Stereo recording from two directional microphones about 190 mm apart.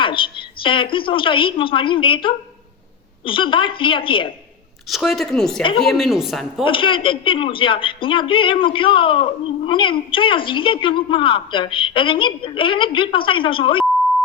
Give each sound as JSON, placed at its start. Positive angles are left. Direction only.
{"t": 0.0, "sound": "a woman's voice", "side_deg": 25}
{"t": 4.9, "sound": "speech", "side_deg": 0}
{"t": 6.7, "sound": "a man's voice", "side_deg": 25}